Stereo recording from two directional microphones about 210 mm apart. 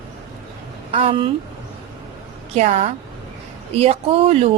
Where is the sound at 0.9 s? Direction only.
25° right (ahead or behind).